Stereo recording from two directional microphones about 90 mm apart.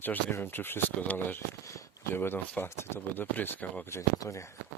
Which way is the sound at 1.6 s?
35° left (ahead or behind).